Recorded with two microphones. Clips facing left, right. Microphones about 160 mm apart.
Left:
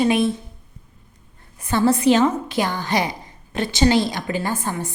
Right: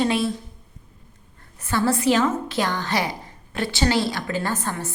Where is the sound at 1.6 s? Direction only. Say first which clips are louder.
Left 4 dB; 20° left (ahead or behind).